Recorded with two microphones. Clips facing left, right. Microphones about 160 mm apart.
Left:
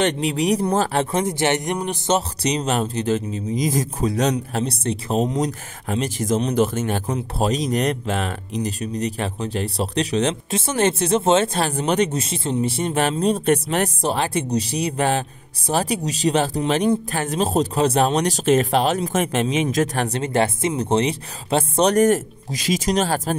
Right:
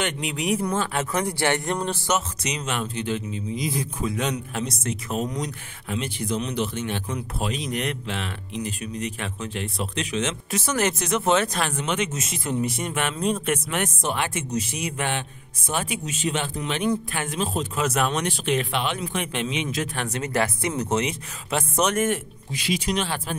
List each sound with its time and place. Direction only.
0.0 s speech: 35° left (ahead or behind)
1.1 s speech: 20° left (ahead or behind)
2.1 s speech: 35° left (ahead or behind)
20.1 s speech: 30° left (ahead or behind)